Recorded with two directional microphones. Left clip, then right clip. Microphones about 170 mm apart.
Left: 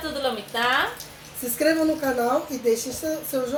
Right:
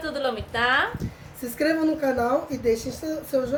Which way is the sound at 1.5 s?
25° right (ahead or behind).